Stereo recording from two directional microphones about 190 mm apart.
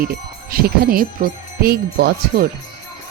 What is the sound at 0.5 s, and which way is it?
A woman's voice, 50° right (ahead or behind).